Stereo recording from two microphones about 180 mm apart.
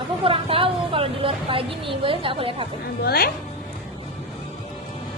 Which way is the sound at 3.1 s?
60° left (ahead or behind).